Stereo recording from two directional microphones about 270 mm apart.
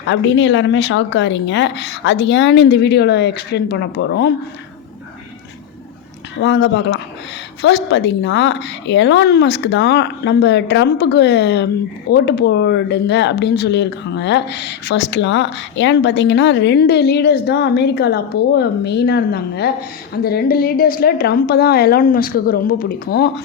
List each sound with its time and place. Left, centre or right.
0.0 s speech: left
6.4 s speech: left